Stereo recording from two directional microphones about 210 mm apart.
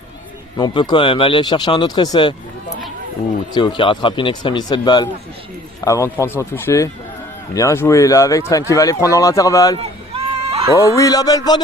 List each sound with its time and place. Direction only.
0.5 s speech: 20° left (ahead or behind)
3.5 s speech: 20° left (ahead or behind)
9.7 s run: 30° right (ahead or behind)
10.8 s speech: 15° left (ahead or behind)